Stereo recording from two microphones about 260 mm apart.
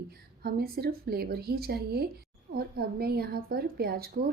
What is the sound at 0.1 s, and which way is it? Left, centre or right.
A woman's voice, right.